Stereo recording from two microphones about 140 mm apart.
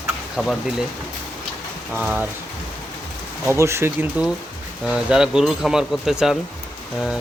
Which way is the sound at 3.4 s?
20° right (ahead or behind).